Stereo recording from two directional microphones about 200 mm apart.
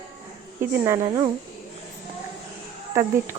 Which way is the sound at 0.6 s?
10° right (ahead or behind).